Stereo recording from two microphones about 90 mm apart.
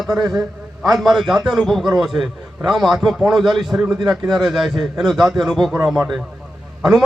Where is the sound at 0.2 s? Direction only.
45° right (ahead or behind).